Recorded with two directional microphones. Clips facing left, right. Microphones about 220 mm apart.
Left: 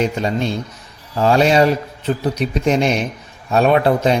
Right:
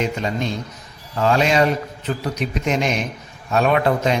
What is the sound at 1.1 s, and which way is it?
A man's voice, 35° left (ahead or behind).